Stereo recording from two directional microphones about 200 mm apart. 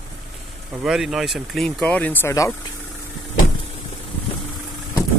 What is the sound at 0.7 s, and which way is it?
Speech, centre (ahead or behind).